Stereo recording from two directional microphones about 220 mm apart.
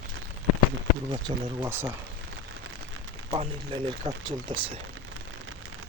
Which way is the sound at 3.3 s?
25° right (ahead or behind).